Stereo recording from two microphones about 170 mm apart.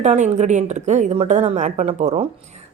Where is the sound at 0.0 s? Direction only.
40° right (ahead or behind).